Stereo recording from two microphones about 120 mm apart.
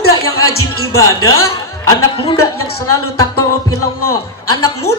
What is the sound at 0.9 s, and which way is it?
Speech, 25° left (ahead or behind).